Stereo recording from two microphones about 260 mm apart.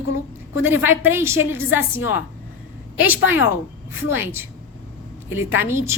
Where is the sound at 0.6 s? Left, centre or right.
Centre.